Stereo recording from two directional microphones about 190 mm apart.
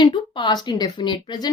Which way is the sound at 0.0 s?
25° left (ahead or behind).